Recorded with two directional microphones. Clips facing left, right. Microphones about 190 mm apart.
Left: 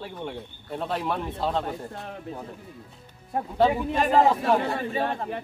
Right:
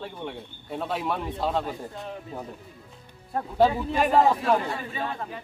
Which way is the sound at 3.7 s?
15° left (ahead or behind).